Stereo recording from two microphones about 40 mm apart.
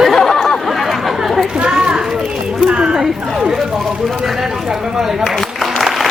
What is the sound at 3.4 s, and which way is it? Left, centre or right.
Speech, centre.